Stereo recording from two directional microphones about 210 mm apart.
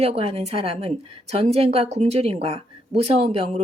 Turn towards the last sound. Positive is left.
turn(degrees=-30)  # may be behind; listen again after turning